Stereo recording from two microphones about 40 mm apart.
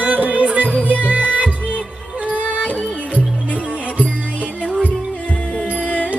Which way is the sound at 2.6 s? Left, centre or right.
Left.